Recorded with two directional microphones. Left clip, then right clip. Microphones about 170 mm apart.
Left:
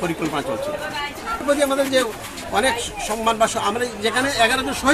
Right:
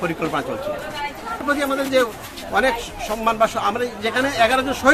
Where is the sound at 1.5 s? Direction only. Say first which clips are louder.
Even; centre (ahead or behind).